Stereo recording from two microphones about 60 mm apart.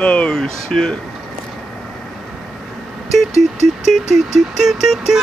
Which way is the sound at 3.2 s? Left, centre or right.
Centre.